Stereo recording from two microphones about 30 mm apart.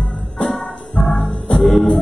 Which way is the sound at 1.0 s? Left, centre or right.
Left.